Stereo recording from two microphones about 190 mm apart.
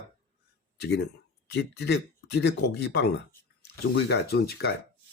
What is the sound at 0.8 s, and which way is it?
Speech, 60° left (ahead or behind).